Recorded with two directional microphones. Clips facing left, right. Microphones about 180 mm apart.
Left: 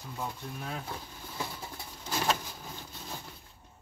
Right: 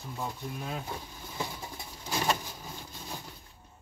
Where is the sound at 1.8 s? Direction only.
10° right (ahead or behind).